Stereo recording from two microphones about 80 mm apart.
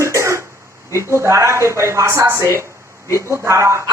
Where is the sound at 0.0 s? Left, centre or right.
Right.